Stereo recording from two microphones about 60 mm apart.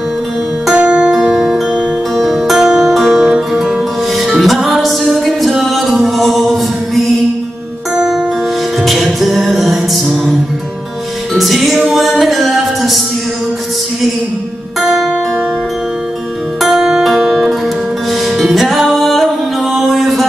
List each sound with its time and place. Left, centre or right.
0.7 s music: centre
3.3 s music: centre
7.9 s music: centre
11.3 s music: centre
14.8 s music: centre
16.6 s music: centre